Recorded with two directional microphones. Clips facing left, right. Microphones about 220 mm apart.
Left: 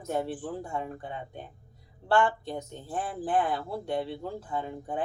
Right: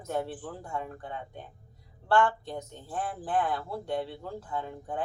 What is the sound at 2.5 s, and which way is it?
Speech, 10° left (ahead or behind).